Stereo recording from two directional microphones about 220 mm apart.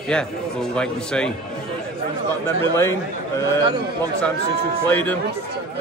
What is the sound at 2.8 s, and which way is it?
Speech, 15° left (ahead or behind).